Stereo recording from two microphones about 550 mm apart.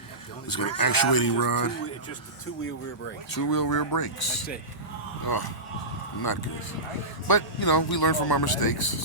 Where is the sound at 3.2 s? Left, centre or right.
Left.